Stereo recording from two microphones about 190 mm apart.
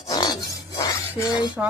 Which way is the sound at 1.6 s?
5° right (ahead or behind).